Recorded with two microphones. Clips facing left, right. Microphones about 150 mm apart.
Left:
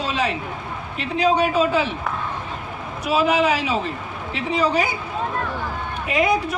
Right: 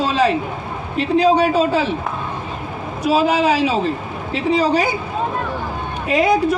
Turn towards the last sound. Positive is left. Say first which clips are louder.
# right 5 dB
turn(degrees=-35)  # may be behind; listen again after turning